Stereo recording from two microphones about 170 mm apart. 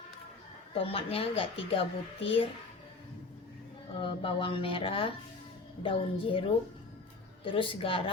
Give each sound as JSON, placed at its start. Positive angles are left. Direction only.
{"t": 0.7, "sound": "a child's voice", "side_deg": 35}
{"t": 3.9, "sound": "a child's voice", "side_deg": 30}
{"t": 7.4, "sound": "a child's voice", "side_deg": 30}